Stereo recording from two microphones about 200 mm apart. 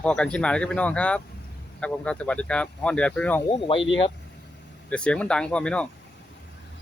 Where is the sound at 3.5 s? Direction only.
25° left (ahead or behind).